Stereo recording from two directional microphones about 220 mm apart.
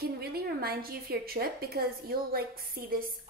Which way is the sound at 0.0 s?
45° right (ahead or behind).